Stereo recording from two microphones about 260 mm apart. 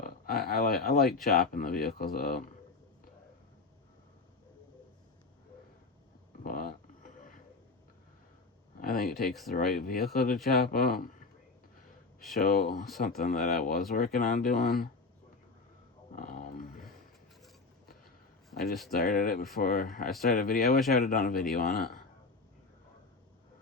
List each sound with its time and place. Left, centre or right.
0.0 s speech: left
6.4 s a sound: left
8.8 s speech: left
12.4 s speech: left
16.1 s a sound: left
18.9 s speech: left